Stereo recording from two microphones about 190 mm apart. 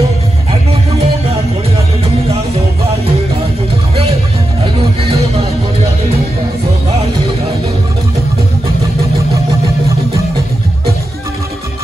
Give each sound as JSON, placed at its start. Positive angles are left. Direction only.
{"t": 0.5, "sound": "music", "side_deg": -35}